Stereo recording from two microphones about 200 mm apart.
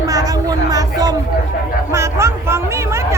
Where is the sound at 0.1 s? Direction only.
15° right (ahead or behind).